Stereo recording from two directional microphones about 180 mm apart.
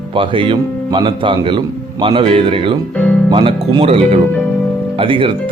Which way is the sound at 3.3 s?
25° right (ahead or behind).